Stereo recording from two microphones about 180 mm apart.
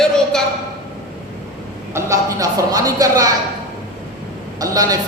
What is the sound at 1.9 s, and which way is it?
Speech, 15° right (ahead or behind).